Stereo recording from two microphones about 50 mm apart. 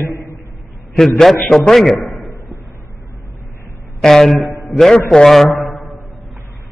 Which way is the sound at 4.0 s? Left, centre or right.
Centre.